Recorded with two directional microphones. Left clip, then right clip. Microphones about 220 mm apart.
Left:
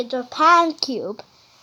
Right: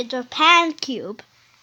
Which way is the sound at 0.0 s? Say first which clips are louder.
Left 1 dB; 30° right (ahead or behind).